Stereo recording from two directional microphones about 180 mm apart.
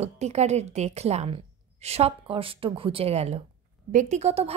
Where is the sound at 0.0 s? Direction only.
35° right (ahead or behind).